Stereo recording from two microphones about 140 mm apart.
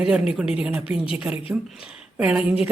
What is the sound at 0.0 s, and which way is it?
A woman's voice, 5° right (ahead or behind).